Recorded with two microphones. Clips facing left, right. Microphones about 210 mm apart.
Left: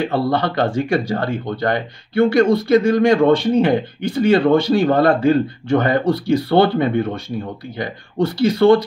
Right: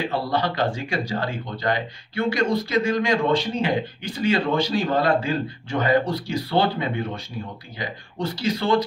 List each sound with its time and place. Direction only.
0.1 s speech: 55° left (ahead or behind)